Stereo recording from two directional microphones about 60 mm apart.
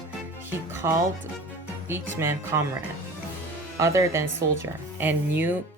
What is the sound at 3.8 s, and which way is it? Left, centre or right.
Speech, right.